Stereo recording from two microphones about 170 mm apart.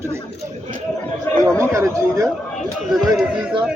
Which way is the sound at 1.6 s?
15° right (ahead or behind).